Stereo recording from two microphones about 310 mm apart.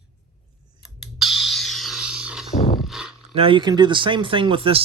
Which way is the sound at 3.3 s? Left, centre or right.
Centre.